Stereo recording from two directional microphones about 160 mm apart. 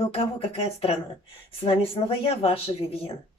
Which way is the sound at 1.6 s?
35° left (ahead or behind).